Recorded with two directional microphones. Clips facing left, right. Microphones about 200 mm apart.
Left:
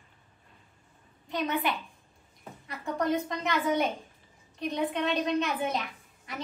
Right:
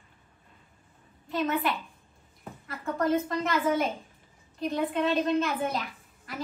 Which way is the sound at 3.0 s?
Centre (ahead or behind).